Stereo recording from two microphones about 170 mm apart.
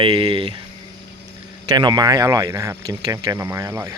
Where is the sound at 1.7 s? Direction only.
25° right (ahead or behind).